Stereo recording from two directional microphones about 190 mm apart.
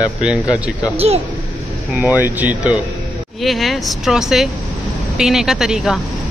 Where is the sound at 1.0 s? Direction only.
30° right (ahead or behind).